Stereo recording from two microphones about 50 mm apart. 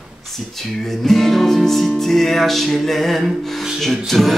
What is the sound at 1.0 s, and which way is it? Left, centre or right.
Music, centre.